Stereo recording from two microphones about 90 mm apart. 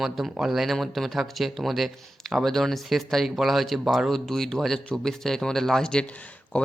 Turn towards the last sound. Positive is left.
turn(degrees=15)  # may be behind; listen again after turning